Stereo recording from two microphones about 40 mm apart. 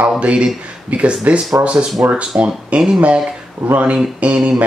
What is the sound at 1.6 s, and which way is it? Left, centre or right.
Speech, right.